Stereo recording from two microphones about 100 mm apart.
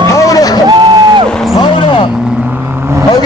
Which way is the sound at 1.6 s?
55° left (ahead or behind).